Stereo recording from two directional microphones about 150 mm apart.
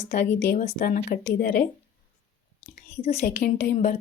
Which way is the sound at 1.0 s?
65° left (ahead or behind).